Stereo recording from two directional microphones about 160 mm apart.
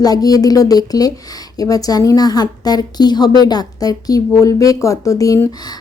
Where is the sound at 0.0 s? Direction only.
25° left (ahead or behind).